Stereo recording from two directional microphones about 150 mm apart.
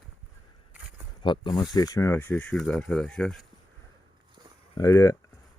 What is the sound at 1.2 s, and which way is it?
Speech, 30° left (ahead or behind).